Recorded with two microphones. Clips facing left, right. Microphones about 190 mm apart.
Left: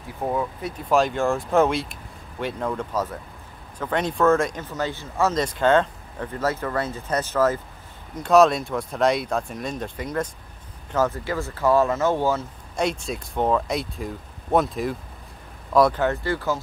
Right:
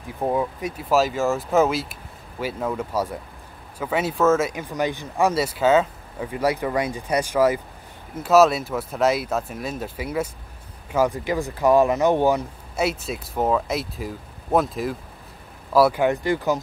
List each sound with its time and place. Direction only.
0.2 s speech: 15° right (ahead or behind)
12.7 s speech: 5° right (ahead or behind)